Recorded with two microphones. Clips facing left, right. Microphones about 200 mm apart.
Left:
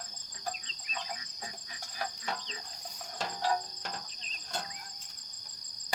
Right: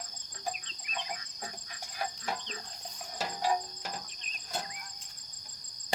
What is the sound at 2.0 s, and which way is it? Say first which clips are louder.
Cricket: right 1 dB; 5° right (ahead or behind).